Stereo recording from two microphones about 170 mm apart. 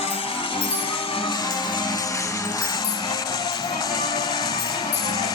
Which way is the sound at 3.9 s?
25° left (ahead or behind).